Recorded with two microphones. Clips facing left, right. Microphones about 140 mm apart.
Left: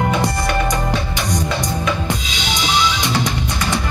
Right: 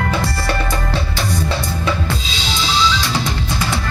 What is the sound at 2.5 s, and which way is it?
Music, 15° left (ahead or behind).